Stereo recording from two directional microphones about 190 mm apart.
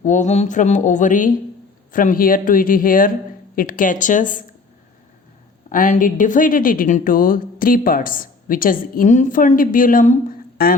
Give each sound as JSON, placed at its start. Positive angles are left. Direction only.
{"t": 0.0, "sound": "mantra", "side_deg": 40}
{"t": 1.9, "sound": "a woman's voice", "side_deg": 45}
{"t": 5.6, "sound": "a woman's voice", "side_deg": 45}